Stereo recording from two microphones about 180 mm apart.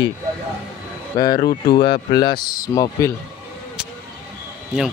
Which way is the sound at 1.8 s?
25° left (ahead or behind).